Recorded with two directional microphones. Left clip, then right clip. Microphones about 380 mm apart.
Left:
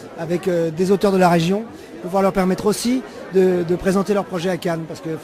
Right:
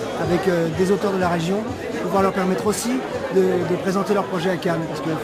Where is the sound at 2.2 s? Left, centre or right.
Left.